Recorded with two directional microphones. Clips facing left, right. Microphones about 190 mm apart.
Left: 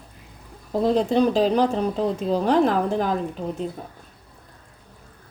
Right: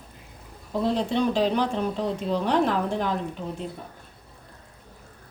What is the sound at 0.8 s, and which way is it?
Speech, 40° left (ahead or behind).